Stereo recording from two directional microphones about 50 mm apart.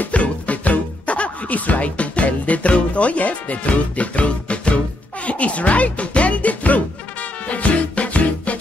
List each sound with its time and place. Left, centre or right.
0.0 s music: left